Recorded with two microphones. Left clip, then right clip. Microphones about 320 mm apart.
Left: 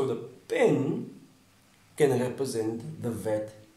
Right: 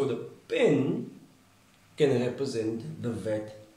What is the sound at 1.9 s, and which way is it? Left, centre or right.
Speech, left.